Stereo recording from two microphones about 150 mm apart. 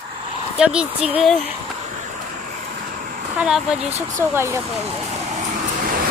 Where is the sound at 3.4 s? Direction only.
5° right (ahead or behind).